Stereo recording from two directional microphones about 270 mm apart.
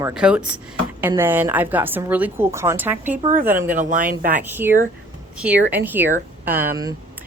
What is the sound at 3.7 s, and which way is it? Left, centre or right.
Speech, right.